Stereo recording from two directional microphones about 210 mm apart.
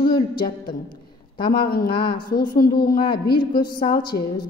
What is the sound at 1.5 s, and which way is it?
A woman's voice, 45° left (ahead or behind).